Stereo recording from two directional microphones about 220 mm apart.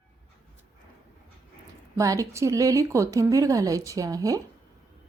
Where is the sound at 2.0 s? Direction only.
15° right (ahead or behind).